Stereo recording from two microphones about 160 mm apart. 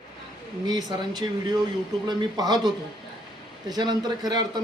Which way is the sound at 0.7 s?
25° right (ahead or behind).